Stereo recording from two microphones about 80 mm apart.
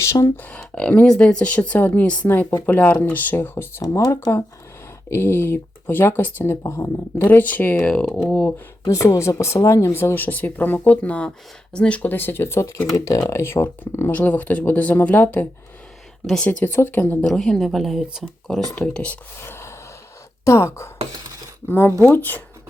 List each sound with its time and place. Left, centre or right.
0.0 s speech: left
0.6 s speech: centre
3.8 s speech: left; by 8.3 s centre
8.3 s speech: left
8.9 s speech: left
13.4 s speech: left
16.2 s speech: centre
16.5 s speech: left
17.2 s speech: centre
18.7 s speech: centre
19.4 s gasp: left
20.4 s speech: left